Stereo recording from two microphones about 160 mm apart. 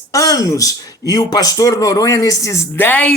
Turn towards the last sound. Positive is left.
turn(degrees=10)  # may be behind; listen again after turning